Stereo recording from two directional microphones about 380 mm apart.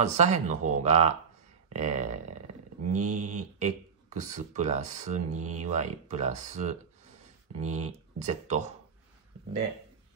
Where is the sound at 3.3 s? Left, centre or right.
Centre.